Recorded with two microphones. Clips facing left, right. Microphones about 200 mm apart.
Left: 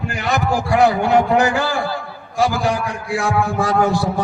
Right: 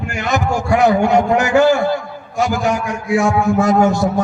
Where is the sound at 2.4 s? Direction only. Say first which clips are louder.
Right 1 dB; 35° left (ahead or behind).